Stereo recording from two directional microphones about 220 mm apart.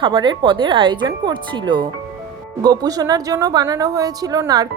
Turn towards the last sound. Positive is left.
turn(degrees=-15)  # may be behind; listen again after turning